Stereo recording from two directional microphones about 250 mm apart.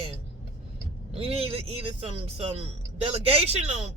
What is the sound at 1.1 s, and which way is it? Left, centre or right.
Speech, right.